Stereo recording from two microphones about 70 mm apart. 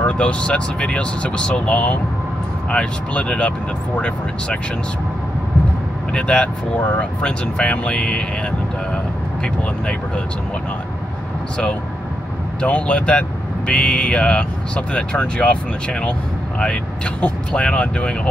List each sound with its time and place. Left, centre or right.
0.0 s speech: centre
6.1 s speech: centre
12.6 s speech: centre